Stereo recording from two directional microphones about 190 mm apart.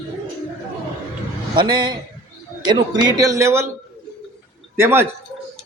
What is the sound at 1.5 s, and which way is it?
A man's voice, 25° right (ahead or behind).